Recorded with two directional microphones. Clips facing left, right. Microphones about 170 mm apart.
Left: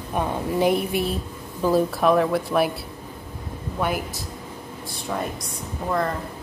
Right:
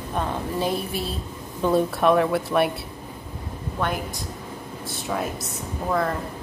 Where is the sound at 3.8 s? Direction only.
10° left (ahead or behind).